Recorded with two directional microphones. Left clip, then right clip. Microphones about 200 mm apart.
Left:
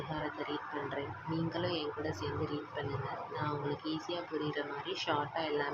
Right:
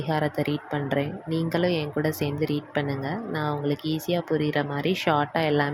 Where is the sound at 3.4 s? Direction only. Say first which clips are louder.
Right 9 dB; 45° right (ahead or behind).